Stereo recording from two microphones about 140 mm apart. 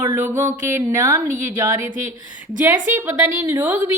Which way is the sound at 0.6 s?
20° right (ahead or behind).